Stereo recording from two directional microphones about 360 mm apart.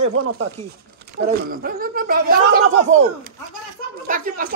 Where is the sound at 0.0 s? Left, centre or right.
Right.